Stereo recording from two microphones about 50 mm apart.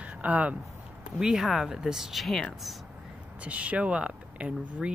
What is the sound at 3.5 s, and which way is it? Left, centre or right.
Speech, right.